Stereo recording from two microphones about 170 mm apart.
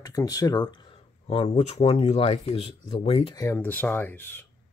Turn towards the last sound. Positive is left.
turn(degrees=10)  # may be behind; listen again after turning